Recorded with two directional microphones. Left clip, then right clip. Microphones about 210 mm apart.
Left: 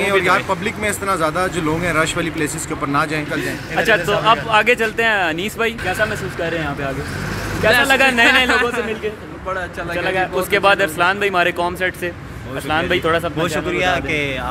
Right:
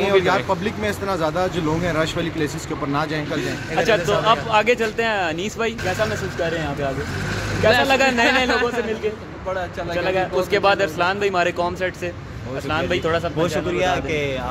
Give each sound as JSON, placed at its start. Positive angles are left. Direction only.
{"t": 0.0, "sound": "speech", "side_deg": -10}
{"t": 3.3, "sound": "speech", "side_deg": 0}
{"t": 7.8, "sound": "speech", "side_deg": 10}
{"t": 8.5, "sound": "speech", "side_deg": -10}
{"t": 9.9, "sound": "speech", "side_deg": 10}
{"t": 13.4, "sound": "speech", "side_deg": -20}